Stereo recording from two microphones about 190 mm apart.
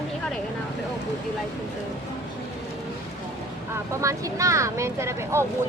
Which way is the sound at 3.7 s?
15° right (ahead or behind).